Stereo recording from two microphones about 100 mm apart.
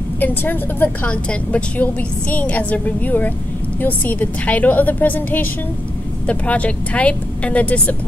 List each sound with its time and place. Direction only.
0.2 s a woman's voice: 20° left (ahead or behind)